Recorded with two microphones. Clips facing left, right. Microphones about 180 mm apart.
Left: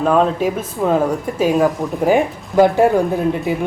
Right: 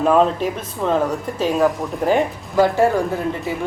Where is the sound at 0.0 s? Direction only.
Centre (ahead or behind).